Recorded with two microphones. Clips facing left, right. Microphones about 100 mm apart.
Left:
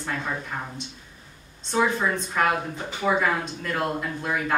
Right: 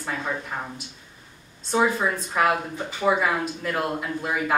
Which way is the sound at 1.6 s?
5° right (ahead or behind).